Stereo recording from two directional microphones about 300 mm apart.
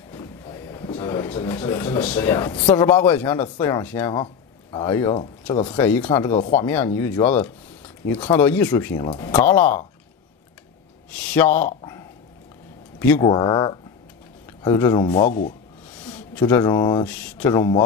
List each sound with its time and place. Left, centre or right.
0.1 s a sound: centre
2.1 s speech: centre
4.1 s speech: centre
5.9 s speech: centre
8.4 s speech: centre
11.3 s speech: centre
13.0 s speech: centre
15.0 s speech: left
16.0 s speech: centre